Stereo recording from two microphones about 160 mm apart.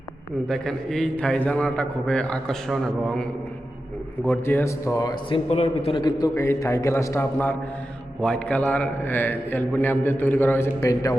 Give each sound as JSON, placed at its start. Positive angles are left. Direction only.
{"t": 0.4, "sound": "a man's voice", "side_deg": 5}
{"t": 4.3, "sound": "a man's voice", "side_deg": 15}
{"t": 5.5, "sound": "a man's voice", "side_deg": 40}
{"t": 6.0, "sound": "a man's voice", "side_deg": 25}